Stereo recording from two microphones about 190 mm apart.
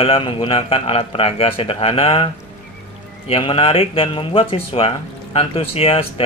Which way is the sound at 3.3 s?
30° left (ahead or behind).